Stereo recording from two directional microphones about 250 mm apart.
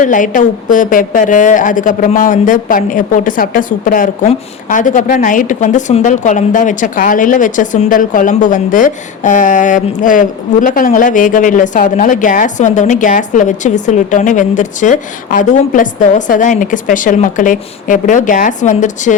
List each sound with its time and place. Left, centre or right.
0.0 s a woman's voice: left